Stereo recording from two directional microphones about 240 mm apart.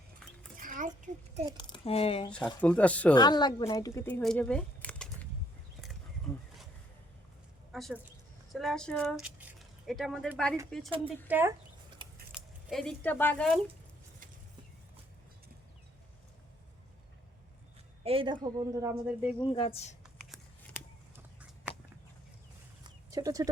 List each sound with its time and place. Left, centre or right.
0.5 s a sound: right
1.5 s speech: left
2.6 s speech: centre
3.2 s speech: centre
6.3 s a sound: centre
7.7 s a woman's voice: centre
11.3 s speech: centre
12.3 s speech: centre
18.0 s a woman's voice: right
19.4 s a woman's voice: left
23.1 s speech: centre